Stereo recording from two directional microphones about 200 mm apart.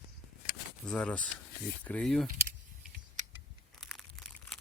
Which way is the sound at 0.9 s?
5° left (ahead or behind).